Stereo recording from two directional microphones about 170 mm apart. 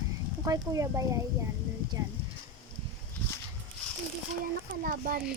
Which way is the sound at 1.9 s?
20° right (ahead or behind).